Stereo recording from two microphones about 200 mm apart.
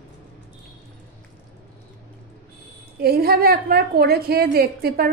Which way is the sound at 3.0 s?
50° right (ahead or behind).